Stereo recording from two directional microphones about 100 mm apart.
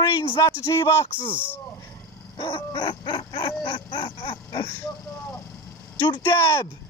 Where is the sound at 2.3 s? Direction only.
55° left (ahead or behind).